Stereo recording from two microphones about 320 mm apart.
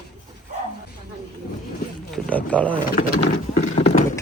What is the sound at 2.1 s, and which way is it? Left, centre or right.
Speech, centre.